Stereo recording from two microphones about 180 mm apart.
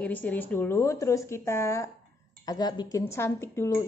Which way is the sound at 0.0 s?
10° left (ahead or behind).